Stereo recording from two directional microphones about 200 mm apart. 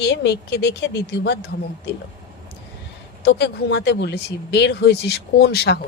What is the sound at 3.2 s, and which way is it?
Speech, 55° left (ahead or behind).